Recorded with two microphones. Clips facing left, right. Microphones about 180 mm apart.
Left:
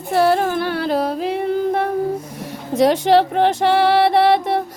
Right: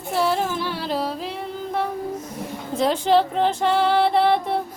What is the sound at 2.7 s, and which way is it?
Speech, 75° left (ahead or behind).